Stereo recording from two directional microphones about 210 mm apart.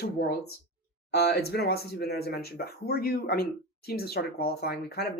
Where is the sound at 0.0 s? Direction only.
50° left (ahead or behind).